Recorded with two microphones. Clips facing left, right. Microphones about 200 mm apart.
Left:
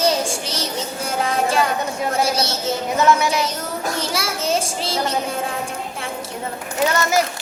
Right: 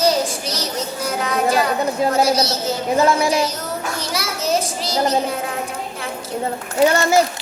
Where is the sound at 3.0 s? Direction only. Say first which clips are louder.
Right 1 dB; 30° right (ahead or behind).